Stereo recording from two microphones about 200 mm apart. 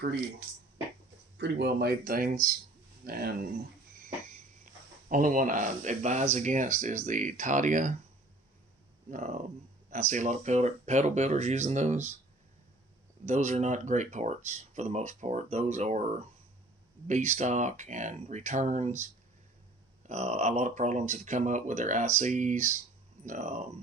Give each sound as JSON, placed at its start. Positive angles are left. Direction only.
{"t": 1.4, "sound": "speech", "side_deg": -55}
{"t": 4.0, "sound": "a sound", "side_deg": -40}
{"t": 6.3, "sound": "speech", "side_deg": -35}
{"t": 9.0, "sound": "speech", "side_deg": -40}
{"t": 13.2, "sound": "speech", "side_deg": -35}
{"t": 20.1, "sound": "speech", "side_deg": -35}